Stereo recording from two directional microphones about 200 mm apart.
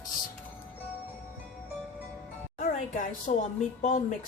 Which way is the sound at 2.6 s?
40° left (ahead or behind).